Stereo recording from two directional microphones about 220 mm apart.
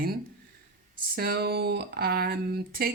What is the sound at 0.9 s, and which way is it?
Speech, 45° right (ahead or behind).